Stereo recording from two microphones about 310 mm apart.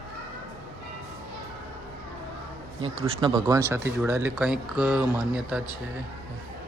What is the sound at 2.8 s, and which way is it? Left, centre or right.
Speech, centre.